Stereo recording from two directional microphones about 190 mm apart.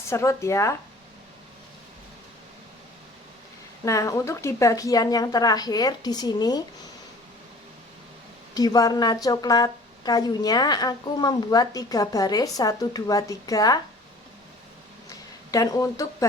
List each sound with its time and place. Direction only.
0.1 s speech: 15° left (ahead or behind)
3.8 s speech: 15° left (ahead or behind)
8.5 s speech: 20° left (ahead or behind)
15.5 s speech: 20° left (ahead or behind)